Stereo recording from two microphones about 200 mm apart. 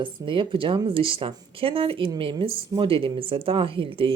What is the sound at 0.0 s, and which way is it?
Speech, 25° right (ahead or behind).